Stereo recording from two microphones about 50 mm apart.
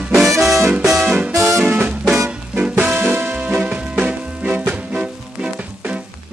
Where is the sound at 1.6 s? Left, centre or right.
Right.